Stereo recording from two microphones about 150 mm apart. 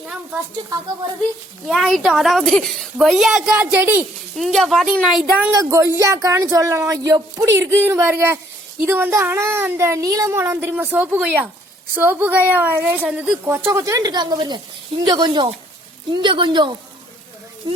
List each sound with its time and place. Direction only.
1.6 s a woman's voice: centre (ahead or behind)
4.4 s a woman's voice: centre (ahead or behind)
5.5 s a woman's voice: 20° right (ahead or behind)